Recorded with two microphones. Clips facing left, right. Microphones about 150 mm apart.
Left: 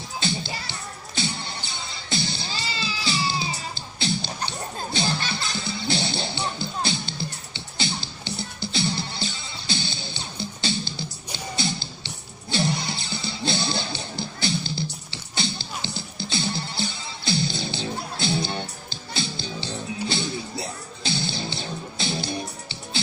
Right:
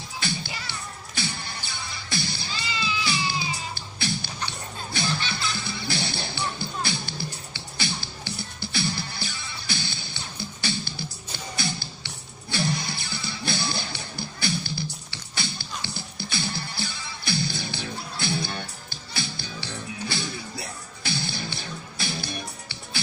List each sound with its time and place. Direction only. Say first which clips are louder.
0.2 s music: left 3 dB; 25° left (ahead or behind)
3.1 s music: left 2 dB; 25° left (ahead or behind)
5.3 s music: left 1 dB; 25° left (ahead or behind)